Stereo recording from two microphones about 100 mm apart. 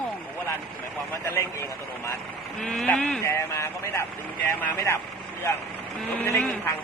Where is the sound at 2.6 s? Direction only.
5° left (ahead or behind).